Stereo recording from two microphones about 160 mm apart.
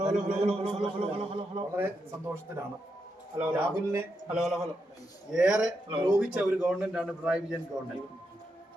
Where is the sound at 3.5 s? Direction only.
15° right (ahead or behind).